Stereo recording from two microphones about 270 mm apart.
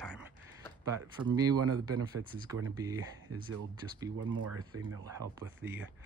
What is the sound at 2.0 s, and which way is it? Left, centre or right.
Speech, centre.